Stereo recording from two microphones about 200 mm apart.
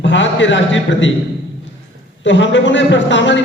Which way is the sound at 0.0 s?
65° left (ahead or behind).